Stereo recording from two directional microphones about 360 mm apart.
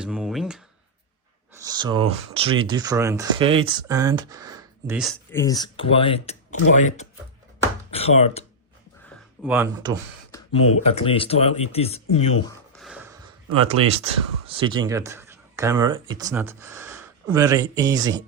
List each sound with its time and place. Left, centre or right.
0.0 s a sound: centre
1.6 s speech: centre
7.9 s speech: centre
9.4 s speech: centre
10.6 s speech: left
10.8 s speech: centre
12.7 s a sound: centre
13.7 s speech: centre